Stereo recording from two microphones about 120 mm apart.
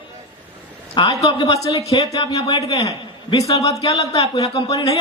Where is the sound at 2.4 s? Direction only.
45° left (ahead or behind).